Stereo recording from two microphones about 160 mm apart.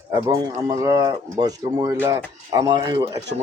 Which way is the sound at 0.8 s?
20° right (ahead or behind).